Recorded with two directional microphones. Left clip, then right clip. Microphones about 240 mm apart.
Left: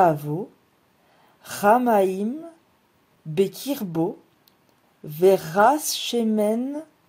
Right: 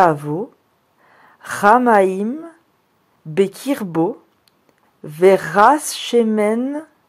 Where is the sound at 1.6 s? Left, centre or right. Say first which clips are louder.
Right 6 dB; right.